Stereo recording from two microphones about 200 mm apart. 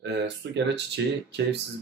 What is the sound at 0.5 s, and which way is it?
Speech, 60° right (ahead or behind).